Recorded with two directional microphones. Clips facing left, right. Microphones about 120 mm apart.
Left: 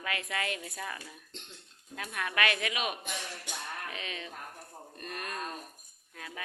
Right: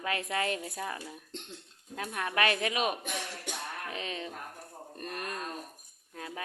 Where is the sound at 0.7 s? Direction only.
20° right (ahead or behind).